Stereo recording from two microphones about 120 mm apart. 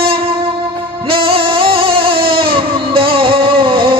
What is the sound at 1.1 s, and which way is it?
Music, 50° right (ahead or behind).